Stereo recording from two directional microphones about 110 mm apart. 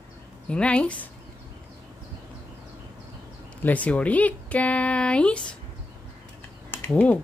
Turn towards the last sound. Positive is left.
turn(degrees=15)  # may be behind; listen again after turning